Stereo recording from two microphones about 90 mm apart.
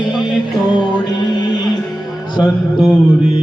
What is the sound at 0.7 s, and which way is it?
Music, 55° left (ahead or behind).